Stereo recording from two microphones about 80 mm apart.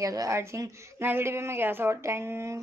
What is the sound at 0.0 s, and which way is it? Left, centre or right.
Speech, right.